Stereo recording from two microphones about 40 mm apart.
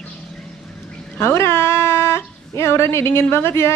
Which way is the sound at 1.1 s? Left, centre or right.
Left.